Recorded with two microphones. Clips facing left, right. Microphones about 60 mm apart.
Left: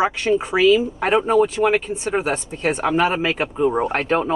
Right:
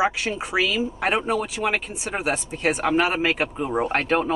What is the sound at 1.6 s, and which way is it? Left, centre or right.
Speech, centre.